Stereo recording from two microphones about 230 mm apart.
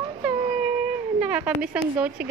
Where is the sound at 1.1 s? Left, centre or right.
Centre.